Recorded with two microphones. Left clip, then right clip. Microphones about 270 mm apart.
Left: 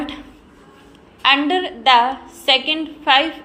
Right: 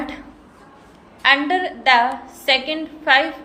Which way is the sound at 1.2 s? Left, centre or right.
Centre.